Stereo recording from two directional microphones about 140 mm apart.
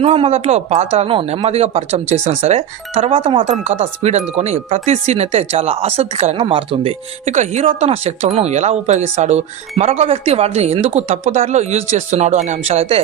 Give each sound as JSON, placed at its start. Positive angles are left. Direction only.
{"t": 0.0, "sound": "speech", "side_deg": -45}
{"t": 3.6, "sound": "speech", "side_deg": -50}
{"t": 6.4, "sound": "speech", "side_deg": -40}
{"t": 7.3, "sound": "speech", "side_deg": -55}